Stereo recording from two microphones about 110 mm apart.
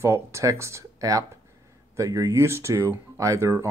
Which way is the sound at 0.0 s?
25° right (ahead or behind).